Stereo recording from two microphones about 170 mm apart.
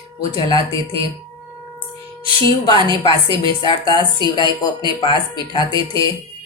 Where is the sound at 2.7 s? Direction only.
30° right (ahead or behind).